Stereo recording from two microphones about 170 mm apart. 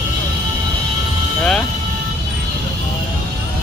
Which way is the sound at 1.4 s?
5° left (ahead or behind).